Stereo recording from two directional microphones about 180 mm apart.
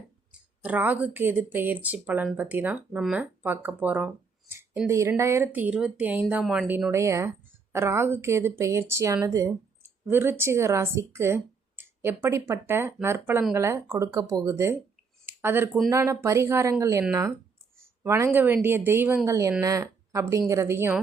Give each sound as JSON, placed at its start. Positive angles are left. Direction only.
{"t": 0.6, "sound": "speech", "side_deg": -10}
{"t": 18.0, "sound": "speech", "side_deg": -15}